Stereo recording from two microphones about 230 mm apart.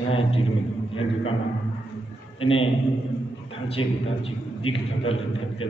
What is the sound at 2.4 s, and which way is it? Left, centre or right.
Speech, left.